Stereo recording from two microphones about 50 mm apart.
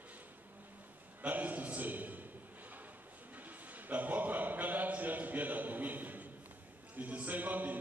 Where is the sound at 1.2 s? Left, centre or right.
Right.